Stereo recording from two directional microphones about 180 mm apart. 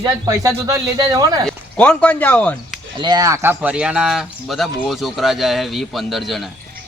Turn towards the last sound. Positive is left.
turn(degrees=0)  # may be behind; listen again after turning